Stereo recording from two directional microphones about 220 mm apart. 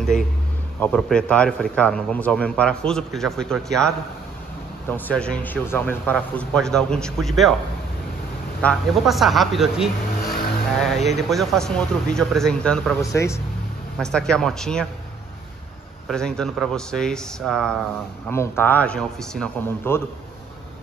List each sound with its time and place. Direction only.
0.7 s a man's voice: 5° left (ahead or behind)
8.6 s a man's voice: centre (ahead or behind)
13.0 s a man's voice: 15° left (ahead or behind)
13.9 s a man's voice: 5° left (ahead or behind)
16.1 s a man's voice: 5° left (ahead or behind)
18.3 s a man's voice: 10° left (ahead or behind)